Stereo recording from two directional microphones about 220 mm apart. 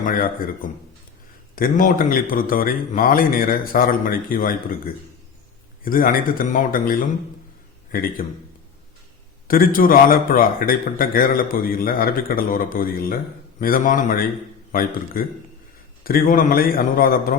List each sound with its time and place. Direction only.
0.0 s a man's voice: 40° left (ahead or behind)
5.8 s a man's voice: 40° left (ahead or behind)
8.2 s a man's voice: 35° left (ahead or behind)
9.5 s a man's voice: 40° left (ahead or behind)